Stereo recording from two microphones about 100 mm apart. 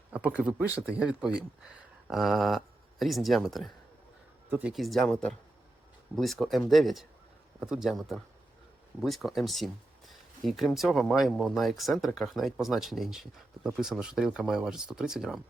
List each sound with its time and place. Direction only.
0.1 s speech: 15° right (ahead or behind); by 3.7 s centre (ahead or behind)
4.4 s speech: 15° right (ahead or behind)
4.7 s speech: centre (ahead or behind)